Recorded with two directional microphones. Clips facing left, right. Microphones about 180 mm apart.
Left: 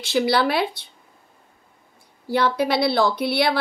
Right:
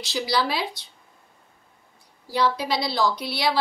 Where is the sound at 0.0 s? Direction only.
55° left (ahead or behind).